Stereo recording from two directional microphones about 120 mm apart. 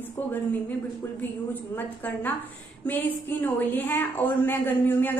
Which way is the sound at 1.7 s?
15° left (ahead or behind).